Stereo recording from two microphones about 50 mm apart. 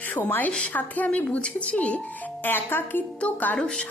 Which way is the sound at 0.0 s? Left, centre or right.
Left.